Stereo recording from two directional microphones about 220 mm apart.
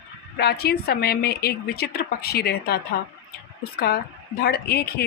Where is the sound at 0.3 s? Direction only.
45° left (ahead or behind).